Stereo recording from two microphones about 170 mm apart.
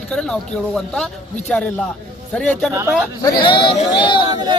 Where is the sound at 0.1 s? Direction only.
5° left (ahead or behind).